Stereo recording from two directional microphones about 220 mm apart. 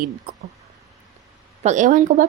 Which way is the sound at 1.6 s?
35° right (ahead or behind).